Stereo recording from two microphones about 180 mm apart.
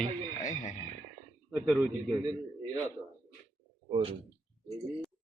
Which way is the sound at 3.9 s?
30° right (ahead or behind).